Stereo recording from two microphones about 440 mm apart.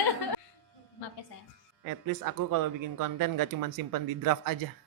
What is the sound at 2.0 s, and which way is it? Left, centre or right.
Speech, right.